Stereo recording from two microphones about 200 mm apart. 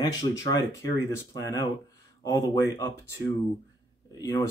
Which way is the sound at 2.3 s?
15° left (ahead or behind).